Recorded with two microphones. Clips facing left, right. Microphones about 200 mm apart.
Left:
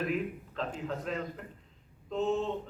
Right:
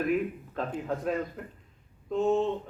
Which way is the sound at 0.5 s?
50° right (ahead or behind).